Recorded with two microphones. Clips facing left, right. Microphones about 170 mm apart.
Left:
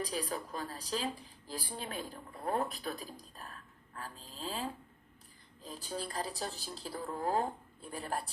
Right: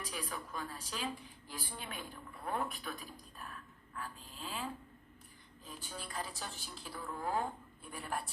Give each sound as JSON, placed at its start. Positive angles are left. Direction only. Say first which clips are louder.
{"t": 0.0, "sound": "a woman's voice", "louder": "left 6 dB", "side_deg": 35}